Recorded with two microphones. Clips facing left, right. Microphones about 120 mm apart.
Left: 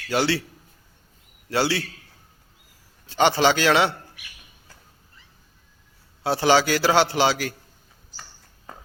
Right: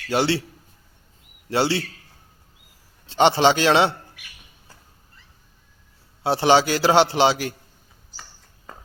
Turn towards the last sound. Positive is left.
turn(degrees=-25)  # may be behind; listen again after turning